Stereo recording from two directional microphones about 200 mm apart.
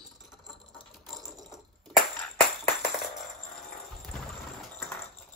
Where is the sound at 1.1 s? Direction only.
Centre (ahead or behind).